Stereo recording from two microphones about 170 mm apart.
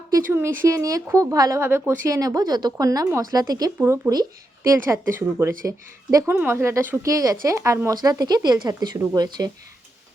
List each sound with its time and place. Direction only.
0.3 s a woman's voice: 15° right (ahead or behind)